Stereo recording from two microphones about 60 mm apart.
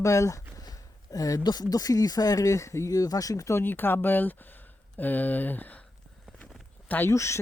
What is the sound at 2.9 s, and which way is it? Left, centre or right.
Speech, left.